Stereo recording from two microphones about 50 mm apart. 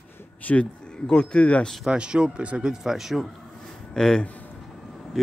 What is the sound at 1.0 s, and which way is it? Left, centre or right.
Speech, centre.